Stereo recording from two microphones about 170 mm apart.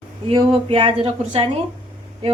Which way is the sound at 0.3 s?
30° right (ahead or behind).